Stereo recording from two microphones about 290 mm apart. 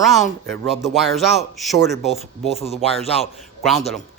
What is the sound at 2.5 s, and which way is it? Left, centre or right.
Speech, left.